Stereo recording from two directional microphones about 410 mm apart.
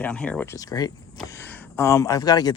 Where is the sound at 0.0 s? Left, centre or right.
Centre.